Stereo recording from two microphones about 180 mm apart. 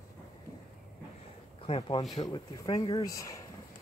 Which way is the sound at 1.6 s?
30° left (ahead or behind).